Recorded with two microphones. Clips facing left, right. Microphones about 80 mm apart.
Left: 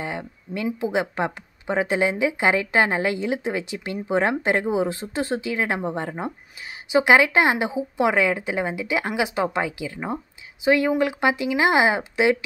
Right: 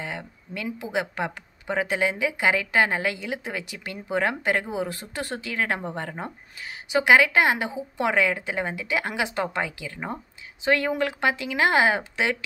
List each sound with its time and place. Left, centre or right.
0.0 s speech: left